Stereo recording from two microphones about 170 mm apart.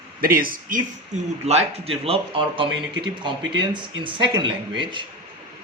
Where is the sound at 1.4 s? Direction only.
35° right (ahead or behind).